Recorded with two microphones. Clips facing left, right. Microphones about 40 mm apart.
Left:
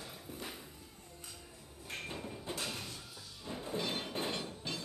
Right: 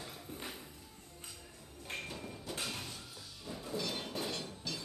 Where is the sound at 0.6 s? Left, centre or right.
Centre.